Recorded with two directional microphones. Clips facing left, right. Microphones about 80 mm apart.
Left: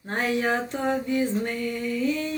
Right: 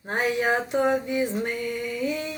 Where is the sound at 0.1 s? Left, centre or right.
Centre.